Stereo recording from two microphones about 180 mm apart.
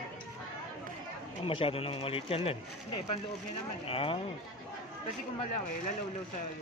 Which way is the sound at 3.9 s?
30° left (ahead or behind).